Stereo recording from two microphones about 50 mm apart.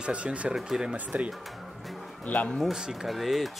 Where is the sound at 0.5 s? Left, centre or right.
Centre.